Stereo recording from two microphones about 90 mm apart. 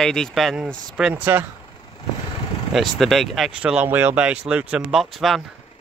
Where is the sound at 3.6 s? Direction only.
15° right (ahead or behind).